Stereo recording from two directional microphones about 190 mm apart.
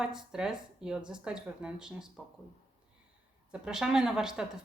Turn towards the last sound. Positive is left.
turn(degrees=-5)  # may be behind; listen again after turning